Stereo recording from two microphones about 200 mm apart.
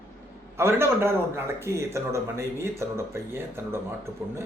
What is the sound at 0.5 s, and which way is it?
Speech, 15° right (ahead or behind).